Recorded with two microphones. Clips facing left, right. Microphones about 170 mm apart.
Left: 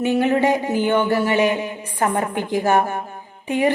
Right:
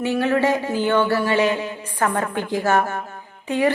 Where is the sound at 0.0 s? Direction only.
20° left (ahead or behind).